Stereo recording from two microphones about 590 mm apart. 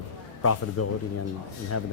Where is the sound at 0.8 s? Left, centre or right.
Left.